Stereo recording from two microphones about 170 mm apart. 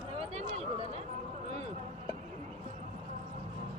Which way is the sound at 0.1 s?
40° right (ahead or behind).